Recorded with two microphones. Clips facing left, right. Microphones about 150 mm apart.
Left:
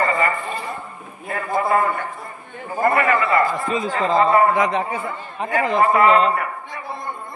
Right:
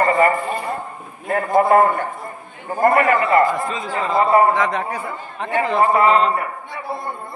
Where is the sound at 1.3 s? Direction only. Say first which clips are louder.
Right 5 dB; 50° right (ahead or behind).